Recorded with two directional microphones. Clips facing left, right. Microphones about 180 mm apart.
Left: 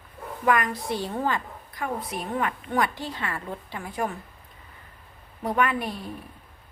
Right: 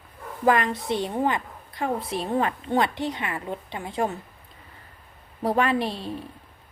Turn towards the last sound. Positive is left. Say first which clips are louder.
# right 4 dB
turn(degrees=-25)  # may be behind; listen again after turning